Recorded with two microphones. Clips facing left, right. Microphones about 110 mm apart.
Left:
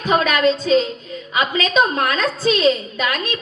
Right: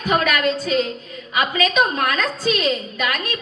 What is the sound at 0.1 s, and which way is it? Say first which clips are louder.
A woman's voice: left 3 dB; 25° left (ahead or behind).